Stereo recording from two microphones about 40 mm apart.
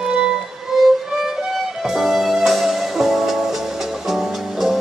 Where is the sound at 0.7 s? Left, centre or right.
Centre.